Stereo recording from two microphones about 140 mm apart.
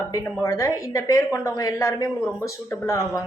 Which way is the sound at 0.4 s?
25° left (ahead or behind).